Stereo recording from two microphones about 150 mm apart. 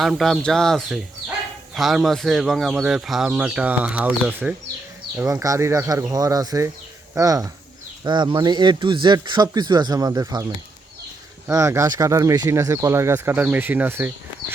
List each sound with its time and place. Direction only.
0.0 s speech: centre (ahead or behind); by 10.4 s 25° right (ahead or behind)
11.4 s speech: 20° right (ahead or behind)